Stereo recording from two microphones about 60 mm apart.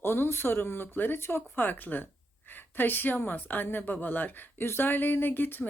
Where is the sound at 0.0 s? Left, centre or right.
Left.